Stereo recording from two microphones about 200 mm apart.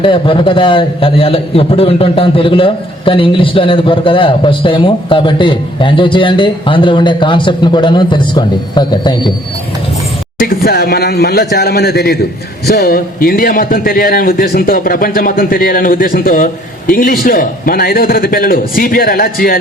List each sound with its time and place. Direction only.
0.0 s a man's voice: 25° left (ahead or behind)
10.4 s a man's voice: 50° left (ahead or behind)